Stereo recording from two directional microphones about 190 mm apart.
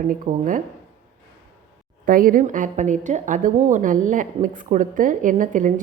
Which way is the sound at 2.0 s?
45° right (ahead or behind).